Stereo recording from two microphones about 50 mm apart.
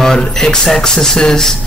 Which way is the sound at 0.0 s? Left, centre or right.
Centre.